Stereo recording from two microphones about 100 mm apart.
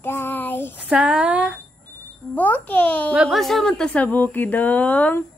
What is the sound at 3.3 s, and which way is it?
Speech, centre (ahead or behind).